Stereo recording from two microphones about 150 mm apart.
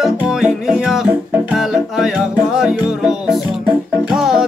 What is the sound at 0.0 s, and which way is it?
Music, 5° right (ahead or behind).